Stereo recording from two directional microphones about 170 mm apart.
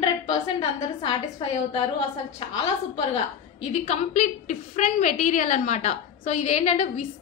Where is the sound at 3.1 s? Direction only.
40° left (ahead or behind).